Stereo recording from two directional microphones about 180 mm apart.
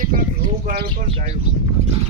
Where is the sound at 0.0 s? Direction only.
45° right (ahead or behind).